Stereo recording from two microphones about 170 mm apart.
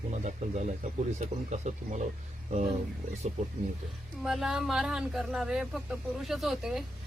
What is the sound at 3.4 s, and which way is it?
Speech, 50° right (ahead or behind).